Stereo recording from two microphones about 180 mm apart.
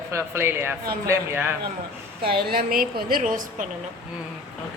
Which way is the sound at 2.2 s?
55° right (ahead or behind).